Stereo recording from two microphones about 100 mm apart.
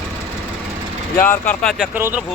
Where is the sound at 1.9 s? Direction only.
20° right (ahead or behind).